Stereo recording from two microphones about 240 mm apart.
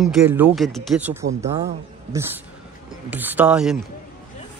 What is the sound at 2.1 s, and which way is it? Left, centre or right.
Speech, centre.